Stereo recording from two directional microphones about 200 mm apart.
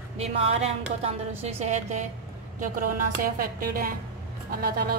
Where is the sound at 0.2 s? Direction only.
30° right (ahead or behind).